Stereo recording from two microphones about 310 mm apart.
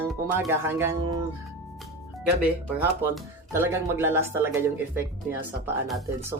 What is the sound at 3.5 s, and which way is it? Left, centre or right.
Speech, centre.